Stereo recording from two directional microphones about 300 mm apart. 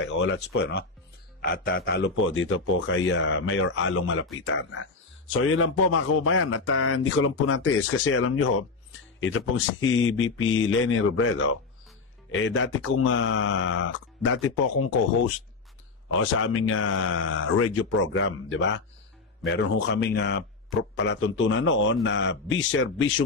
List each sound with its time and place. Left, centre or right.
0.2 s a man's voice: left
16.1 s a man's voice: left